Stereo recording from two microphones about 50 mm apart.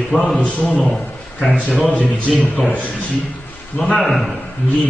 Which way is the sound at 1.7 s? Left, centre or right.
Centre.